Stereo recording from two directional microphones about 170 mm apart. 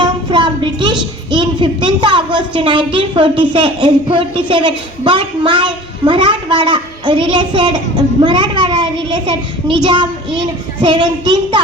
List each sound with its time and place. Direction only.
0.0 s speech: 30° right (ahead or behind)